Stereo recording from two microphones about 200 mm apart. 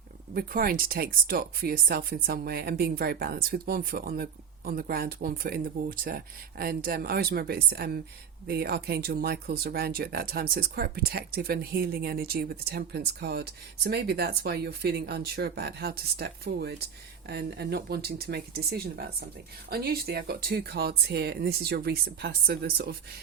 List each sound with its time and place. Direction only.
0.3 s speech: 45° right (ahead or behind)